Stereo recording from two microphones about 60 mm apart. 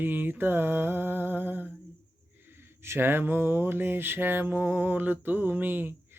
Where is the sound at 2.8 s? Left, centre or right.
Right.